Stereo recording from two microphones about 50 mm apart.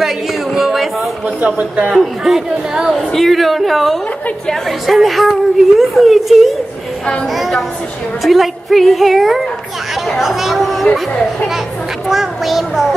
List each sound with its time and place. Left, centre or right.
0.6 s a sound: centre
1.4 s a man's voice: right
1.9 s speech: centre
3.1 s a woman's voice: centre
10.0 s chatter: centre
12.1 s a woman's voice: centre